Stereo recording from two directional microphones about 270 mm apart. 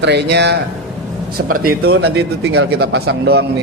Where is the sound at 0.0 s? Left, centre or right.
Right.